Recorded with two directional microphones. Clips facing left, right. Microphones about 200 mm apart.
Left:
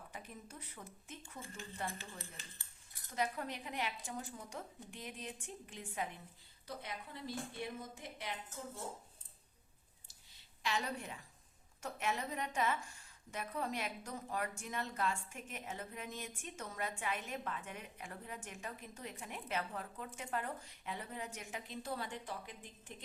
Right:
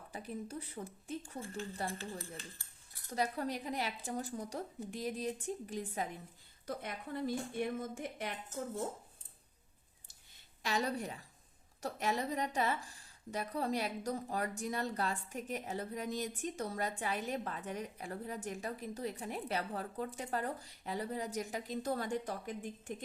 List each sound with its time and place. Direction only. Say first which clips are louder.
0.1 s a woman's voice: right 12 dB; 35° right (ahead or behind)
3.2 s a woman's voice: right 3 dB; 35° right (ahead or behind)
6.7 s a woman's voice: right 6 dB; 50° right (ahead or behind)
10.3 s a woman's voice: right 3 dB; 40° right (ahead or behind)